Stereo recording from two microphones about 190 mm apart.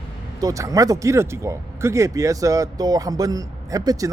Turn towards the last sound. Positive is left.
turn(degrees=-20)  # may be behind; listen again after turning